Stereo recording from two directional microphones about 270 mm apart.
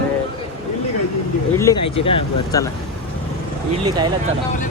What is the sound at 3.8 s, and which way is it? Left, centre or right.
Speech, centre.